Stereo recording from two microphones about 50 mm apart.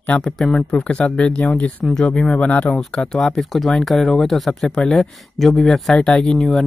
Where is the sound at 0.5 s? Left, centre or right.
Left.